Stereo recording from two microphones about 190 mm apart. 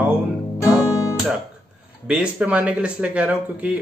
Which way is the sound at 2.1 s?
5° right (ahead or behind).